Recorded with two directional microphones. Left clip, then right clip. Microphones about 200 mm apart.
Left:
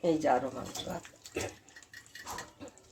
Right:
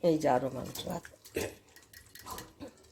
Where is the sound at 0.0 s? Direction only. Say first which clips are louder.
Right 1 dB; 30° right (ahead or behind).